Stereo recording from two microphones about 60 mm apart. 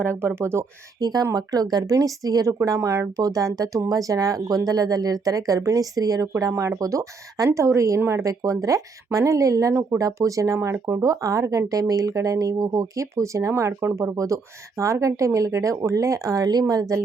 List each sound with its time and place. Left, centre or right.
0.0 s speech: right
1.1 s speech: right
1.7 s speech: right
2.6 s speech: right
3.2 s speech: right
6.5 s speech: right
6.7 s speech: right